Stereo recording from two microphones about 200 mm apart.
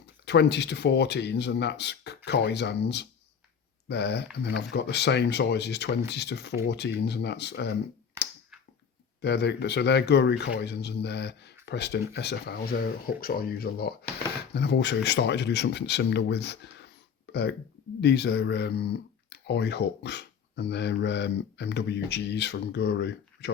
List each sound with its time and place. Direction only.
0.3 s speech: 60° left (ahead or behind)
8.2 s a sound: 15° right (ahead or behind)
9.2 s speech: 55° left (ahead or behind)
18.0 s speech: 55° left (ahead or behind)